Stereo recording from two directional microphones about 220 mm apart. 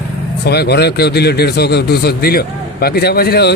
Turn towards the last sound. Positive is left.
turn(degrees=45)  # may be behind; listen again after turning